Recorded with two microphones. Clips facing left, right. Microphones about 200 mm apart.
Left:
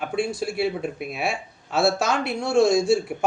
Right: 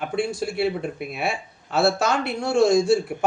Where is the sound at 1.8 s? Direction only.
60° right (ahead or behind).